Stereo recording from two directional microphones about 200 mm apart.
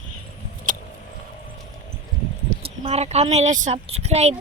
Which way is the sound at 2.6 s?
30° right (ahead or behind).